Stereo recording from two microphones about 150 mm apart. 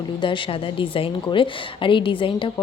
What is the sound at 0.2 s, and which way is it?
A woman's voice, 35° left (ahead or behind).